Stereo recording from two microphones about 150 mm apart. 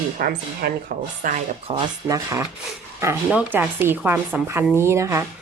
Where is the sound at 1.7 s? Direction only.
35° right (ahead or behind).